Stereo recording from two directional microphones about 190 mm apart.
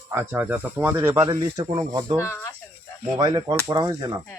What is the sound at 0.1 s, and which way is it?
Speech, 10° right (ahead or behind).